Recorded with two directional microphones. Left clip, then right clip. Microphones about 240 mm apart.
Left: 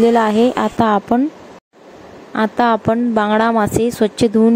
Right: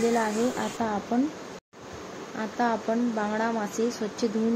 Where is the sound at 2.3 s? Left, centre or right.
Left.